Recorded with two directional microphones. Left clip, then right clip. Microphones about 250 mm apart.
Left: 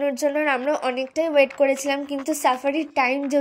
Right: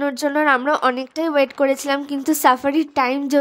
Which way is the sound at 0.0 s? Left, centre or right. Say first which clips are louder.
Right 3 dB; centre.